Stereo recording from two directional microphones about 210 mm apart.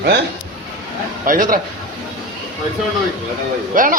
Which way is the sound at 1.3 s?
40° right (ahead or behind).